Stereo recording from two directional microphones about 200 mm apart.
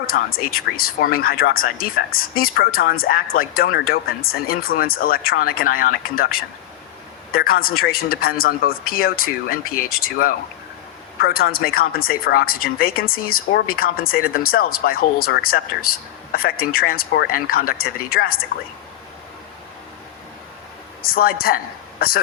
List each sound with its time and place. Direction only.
0.3 s a woman's voice: 50° left (ahead or behind)
21.0 s speech: 50° left (ahead or behind)